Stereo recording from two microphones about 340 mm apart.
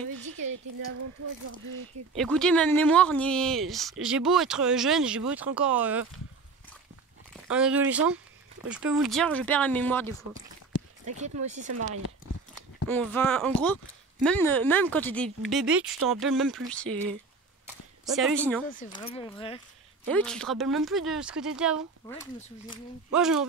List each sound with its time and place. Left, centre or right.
0.2 s a woman's voice: right
2.1 s speech: centre
7.4 s speech: centre
11.1 s speech: centre
12.8 s speech: centre
17.6 s a sound: centre
18.7 s speech: left
20.1 s speech: centre
22.0 s speech: centre
23.1 s speech: centre